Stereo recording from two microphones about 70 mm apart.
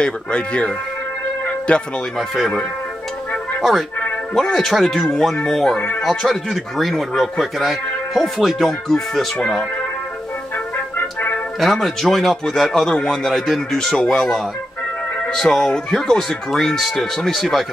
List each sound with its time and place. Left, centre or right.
0.0 s speech: centre
2.1 s speech: centre
4.3 s speech: centre
5.8 s speech: left
6.0 s speech: centre
11.0 s music: left
11.6 s speech: centre